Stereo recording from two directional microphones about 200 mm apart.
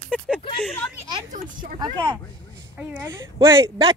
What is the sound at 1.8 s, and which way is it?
Speech, 15° right (ahead or behind).